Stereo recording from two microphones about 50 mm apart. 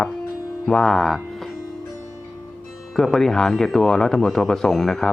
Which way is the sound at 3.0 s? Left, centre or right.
Centre.